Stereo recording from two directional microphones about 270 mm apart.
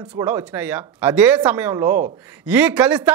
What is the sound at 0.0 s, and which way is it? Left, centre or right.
Speech, centre.